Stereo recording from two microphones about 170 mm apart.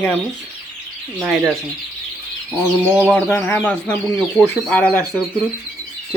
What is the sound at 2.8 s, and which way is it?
Speech, 15° right (ahead or behind).